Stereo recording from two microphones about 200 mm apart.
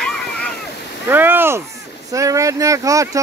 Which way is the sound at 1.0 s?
10° right (ahead or behind).